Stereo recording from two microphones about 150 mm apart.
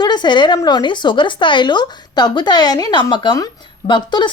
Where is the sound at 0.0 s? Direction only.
30° left (ahead or behind).